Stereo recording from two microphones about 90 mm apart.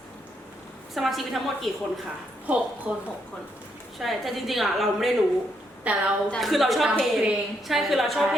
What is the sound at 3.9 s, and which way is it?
A woman's voice, centre (ahead or behind).